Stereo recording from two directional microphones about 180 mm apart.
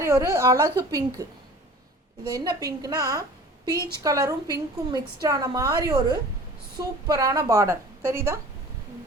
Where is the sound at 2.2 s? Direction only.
20° right (ahead or behind).